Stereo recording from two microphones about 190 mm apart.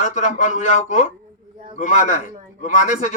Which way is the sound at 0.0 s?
40° left (ahead or behind).